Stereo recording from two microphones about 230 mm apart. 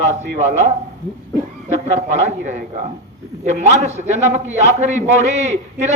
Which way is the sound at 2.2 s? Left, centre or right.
Right.